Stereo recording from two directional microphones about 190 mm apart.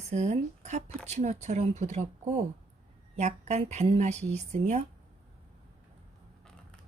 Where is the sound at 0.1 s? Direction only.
35° right (ahead or behind).